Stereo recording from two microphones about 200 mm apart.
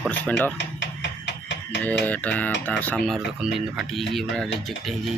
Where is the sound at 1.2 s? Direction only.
55° left (ahead or behind).